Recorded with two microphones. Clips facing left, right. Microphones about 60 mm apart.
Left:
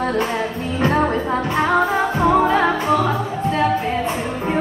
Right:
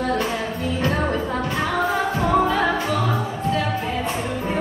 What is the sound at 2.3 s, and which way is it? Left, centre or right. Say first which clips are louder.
Music: left 2 dB; left.